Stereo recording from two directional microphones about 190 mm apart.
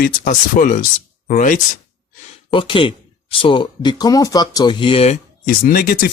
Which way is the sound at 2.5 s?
25° left (ahead or behind).